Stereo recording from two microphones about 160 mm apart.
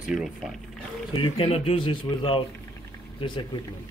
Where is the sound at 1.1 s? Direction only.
35° left (ahead or behind).